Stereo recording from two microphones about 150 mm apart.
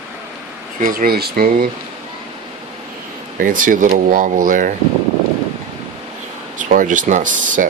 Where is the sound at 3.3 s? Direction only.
60° right (ahead or behind).